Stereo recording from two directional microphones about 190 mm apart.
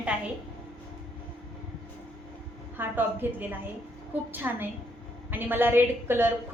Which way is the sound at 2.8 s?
10° right (ahead or behind).